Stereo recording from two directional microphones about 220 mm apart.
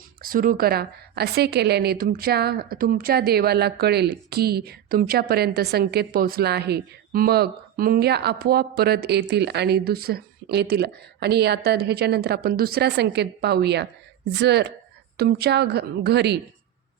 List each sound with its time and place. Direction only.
0.2 s a woman's voice: 40° right (ahead or behind)